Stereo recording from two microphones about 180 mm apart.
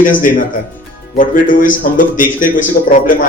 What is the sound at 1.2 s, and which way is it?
Speech, 50° left (ahead or behind).